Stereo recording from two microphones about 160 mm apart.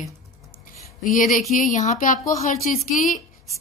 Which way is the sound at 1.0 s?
55° left (ahead or behind).